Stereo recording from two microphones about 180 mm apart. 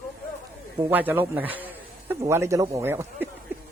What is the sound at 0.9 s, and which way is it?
Speech, 10° right (ahead or behind).